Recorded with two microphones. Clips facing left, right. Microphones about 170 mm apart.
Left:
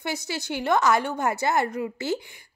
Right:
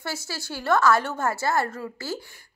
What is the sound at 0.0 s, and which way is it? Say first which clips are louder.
A woman's voice: left 3 dB; 15° left (ahead or behind).